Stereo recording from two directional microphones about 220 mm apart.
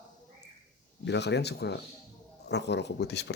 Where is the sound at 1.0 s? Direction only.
50° left (ahead or behind).